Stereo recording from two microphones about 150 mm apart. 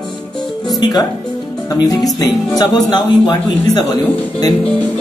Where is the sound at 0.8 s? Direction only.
25° left (ahead or behind).